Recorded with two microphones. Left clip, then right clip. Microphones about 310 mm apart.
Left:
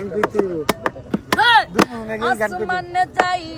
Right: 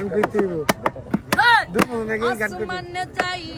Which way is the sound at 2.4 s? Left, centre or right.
Left.